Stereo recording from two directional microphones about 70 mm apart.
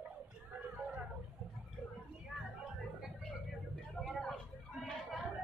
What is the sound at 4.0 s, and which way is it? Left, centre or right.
Vehicle, centre.